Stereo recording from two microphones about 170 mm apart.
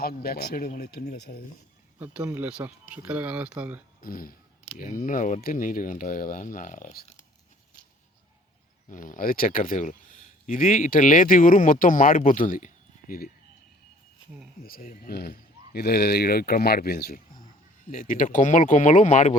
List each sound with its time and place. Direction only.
0.0 s speech: 65° left (ahead or behind)
2.0 s speech: 10° right (ahead or behind)
4.0 s speech: 55° left (ahead or behind)
8.9 s speech: 50° left (ahead or behind)
14.6 s speech: 55° left (ahead or behind)